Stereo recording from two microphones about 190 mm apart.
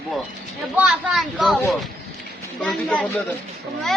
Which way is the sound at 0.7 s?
5° right (ahead or behind).